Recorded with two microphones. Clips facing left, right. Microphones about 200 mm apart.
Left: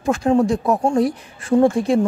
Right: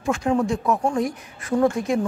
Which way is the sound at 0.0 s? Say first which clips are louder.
Left 5 dB; 35° left (ahead or behind).